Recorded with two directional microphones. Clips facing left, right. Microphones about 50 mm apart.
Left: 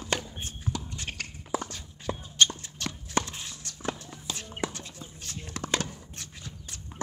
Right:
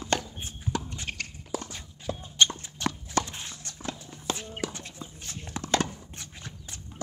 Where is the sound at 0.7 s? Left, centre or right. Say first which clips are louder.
Right 4 dB; right.